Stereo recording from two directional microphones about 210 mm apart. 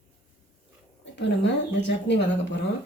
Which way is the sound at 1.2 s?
60° left (ahead or behind).